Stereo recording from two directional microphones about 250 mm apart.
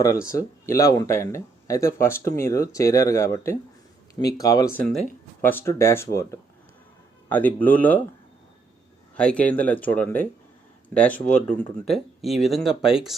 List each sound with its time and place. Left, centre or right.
0.3 s speech: centre
4.9 s speech: centre
9.1 s a man's voice: centre
11.1 s speech: left
11.4 s speech: centre